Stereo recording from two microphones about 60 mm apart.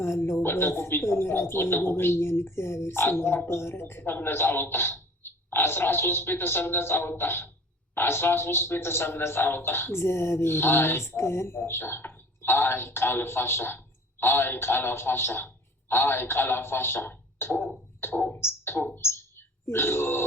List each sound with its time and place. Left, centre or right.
0.0 s speech: left